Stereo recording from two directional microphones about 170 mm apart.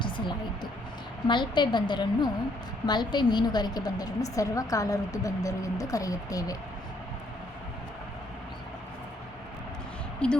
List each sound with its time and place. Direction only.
0.0 s a sound: 25° left (ahead or behind)
1.3 s a woman's voice: 25° left (ahead or behind)
10.2 s speech: 5° left (ahead or behind)